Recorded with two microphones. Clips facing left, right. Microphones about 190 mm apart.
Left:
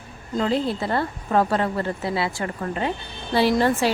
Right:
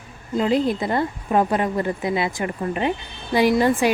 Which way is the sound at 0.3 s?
15° right (ahead or behind).